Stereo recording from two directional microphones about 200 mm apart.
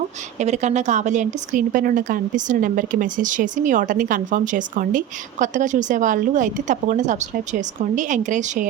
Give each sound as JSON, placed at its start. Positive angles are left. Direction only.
{"t": 0.3, "sound": "a woman's voice", "side_deg": -35}